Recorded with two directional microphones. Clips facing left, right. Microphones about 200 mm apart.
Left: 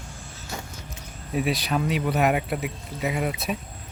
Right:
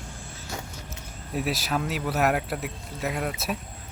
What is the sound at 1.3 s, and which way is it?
Speech, centre (ahead or behind).